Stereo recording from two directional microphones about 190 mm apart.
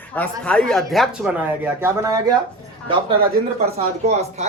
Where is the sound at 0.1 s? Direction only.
5° left (ahead or behind).